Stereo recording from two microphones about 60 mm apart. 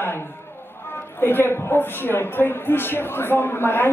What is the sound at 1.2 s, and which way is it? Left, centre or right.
A man's voice, left.